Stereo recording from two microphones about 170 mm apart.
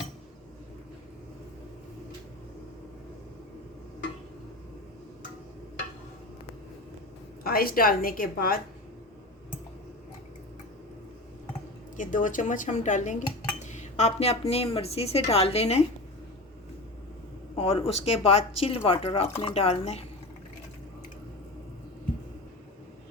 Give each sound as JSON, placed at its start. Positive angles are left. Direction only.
{"t": 7.4, "sound": "a woman's voice", "side_deg": 60}
{"t": 11.9, "sound": "speech", "side_deg": 50}
{"t": 17.6, "sound": "speech", "side_deg": 35}